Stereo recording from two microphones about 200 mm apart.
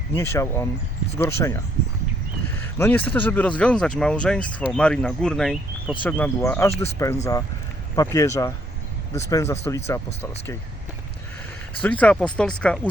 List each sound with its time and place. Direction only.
0.1 s speech: 15° left (ahead or behind)
11.8 s speech: 5° left (ahead or behind)